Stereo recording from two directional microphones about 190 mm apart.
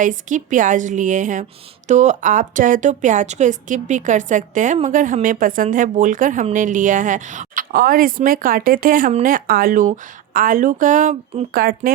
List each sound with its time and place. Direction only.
0.0 s a woman's voice: 45° right (ahead or behind)
11.6 s speech: 50° right (ahead or behind)